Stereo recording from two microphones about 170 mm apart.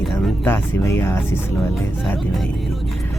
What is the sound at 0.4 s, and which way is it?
Speech, 15° left (ahead or behind).